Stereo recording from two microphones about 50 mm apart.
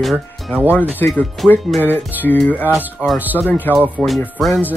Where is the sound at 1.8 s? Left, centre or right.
Left.